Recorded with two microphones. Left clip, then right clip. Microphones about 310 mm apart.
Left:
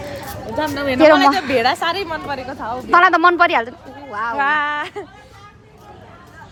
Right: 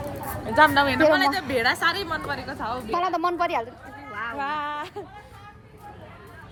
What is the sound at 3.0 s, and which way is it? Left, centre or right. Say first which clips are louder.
Speech: left 13 dB; left.